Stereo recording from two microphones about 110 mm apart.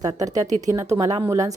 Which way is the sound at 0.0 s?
30° right (ahead or behind).